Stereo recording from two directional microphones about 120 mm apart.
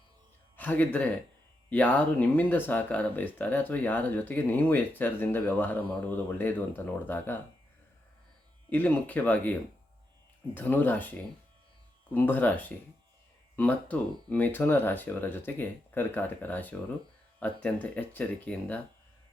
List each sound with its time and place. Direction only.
0.5 s speech: 15° left (ahead or behind)
8.7 s speech: 15° left (ahead or behind)